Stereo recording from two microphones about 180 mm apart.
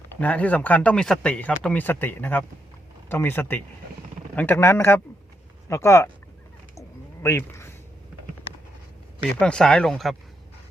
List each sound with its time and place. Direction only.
0.2 s speech: 10° left (ahead or behind)
6.7 s a sound: 15° left (ahead or behind)
9.3 s speech: 5° left (ahead or behind)